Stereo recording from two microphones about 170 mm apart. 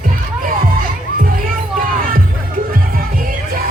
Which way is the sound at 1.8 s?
55° right (ahead or behind).